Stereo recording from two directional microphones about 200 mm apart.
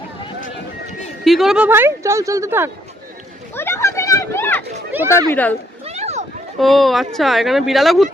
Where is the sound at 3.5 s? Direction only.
10° left (ahead or behind).